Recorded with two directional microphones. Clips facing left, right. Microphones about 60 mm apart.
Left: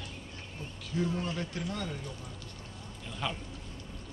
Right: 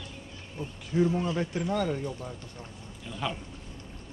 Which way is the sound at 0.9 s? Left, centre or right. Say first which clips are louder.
Right 7 dB; right.